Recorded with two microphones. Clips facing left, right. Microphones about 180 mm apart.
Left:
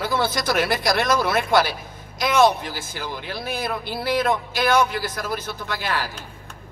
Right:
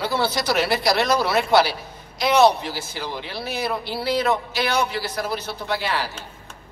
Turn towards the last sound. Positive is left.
turn(degrees=50)  # may be behind; listen again after turning